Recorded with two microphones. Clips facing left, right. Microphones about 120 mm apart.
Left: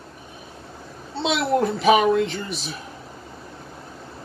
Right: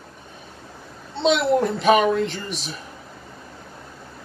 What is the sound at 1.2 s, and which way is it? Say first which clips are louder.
Speech: right 2 dB; centre (ahead or behind).